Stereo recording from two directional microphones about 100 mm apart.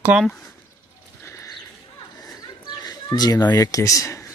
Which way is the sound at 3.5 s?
35° left (ahead or behind).